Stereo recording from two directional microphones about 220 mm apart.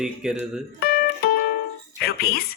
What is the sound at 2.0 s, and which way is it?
Speech, 45° left (ahead or behind).